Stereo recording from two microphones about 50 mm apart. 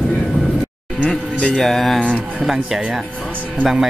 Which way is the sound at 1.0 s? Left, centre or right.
Left.